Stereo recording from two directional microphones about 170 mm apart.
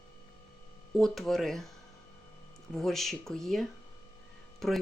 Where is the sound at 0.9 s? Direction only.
Centre (ahead or behind).